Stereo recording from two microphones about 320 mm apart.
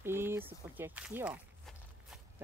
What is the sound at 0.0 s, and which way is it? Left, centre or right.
Walk, centre.